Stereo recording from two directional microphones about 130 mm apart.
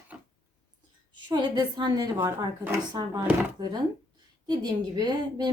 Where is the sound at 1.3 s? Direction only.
35° right (ahead or behind).